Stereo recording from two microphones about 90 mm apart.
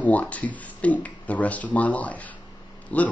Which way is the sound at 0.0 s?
15° left (ahead or behind).